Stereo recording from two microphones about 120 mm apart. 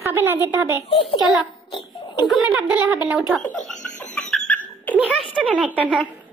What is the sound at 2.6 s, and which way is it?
Speech, 10° right (ahead or behind).